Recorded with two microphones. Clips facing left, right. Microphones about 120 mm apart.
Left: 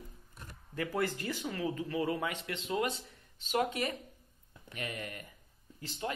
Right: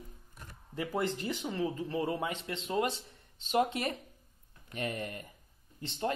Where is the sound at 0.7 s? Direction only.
20° right (ahead or behind).